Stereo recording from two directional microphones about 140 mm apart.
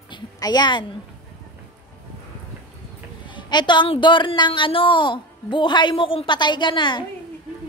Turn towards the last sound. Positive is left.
turn(degrees=35)  # may be behind; listen again after turning